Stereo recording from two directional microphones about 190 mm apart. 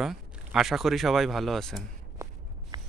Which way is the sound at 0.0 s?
Centre (ahead or behind).